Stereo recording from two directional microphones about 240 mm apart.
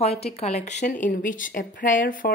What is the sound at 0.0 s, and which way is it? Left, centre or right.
Speech, left.